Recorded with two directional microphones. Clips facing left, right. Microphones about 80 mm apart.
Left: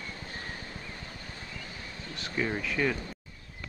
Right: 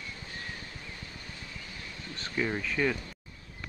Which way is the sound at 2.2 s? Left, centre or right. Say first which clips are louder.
Even; centre.